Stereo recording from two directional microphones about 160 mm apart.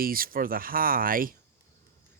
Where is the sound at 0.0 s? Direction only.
65° right (ahead or behind).